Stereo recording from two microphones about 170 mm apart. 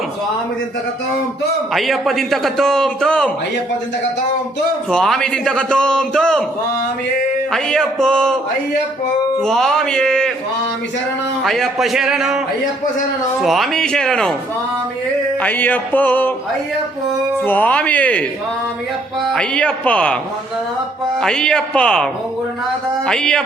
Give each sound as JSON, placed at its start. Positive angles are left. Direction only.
{"t": 1.7, "sound": "a man's voice", "side_deg": 0}
{"t": 4.9, "sound": "a man's voice", "side_deg": 5}
{"t": 7.5, "sound": "a man's voice", "side_deg": 5}
{"t": 9.4, "sound": "a man's voice", "side_deg": 5}
{"t": 11.4, "sound": "a man's voice", "side_deg": 0}
{"t": 13.4, "sound": "a man's voice", "side_deg": 0}
{"t": 15.4, "sound": "music", "side_deg": 10}
{"t": 17.4, "sound": "music", "side_deg": 10}
{"t": 21.2, "sound": "a man's voice", "side_deg": 5}